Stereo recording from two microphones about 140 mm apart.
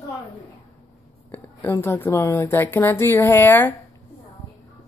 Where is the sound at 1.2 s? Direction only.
15° left (ahead or behind).